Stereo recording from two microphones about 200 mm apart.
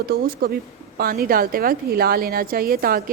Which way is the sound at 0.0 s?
50° right (ahead or behind).